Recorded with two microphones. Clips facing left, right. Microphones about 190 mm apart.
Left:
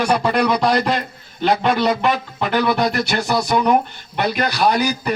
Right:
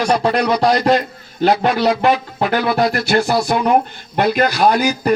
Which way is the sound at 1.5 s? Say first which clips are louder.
Right 2 dB; 5° right (ahead or behind).